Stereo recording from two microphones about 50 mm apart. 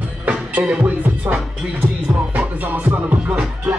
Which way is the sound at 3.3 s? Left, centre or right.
Right.